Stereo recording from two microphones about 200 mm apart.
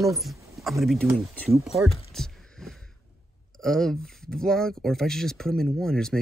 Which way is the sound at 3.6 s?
Centre (ahead or behind).